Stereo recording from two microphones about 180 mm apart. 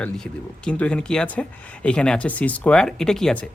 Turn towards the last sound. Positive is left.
turn(degrees=5)  # may be behind; listen again after turning